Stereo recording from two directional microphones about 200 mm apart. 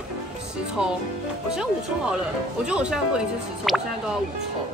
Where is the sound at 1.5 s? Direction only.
5° right (ahead or behind).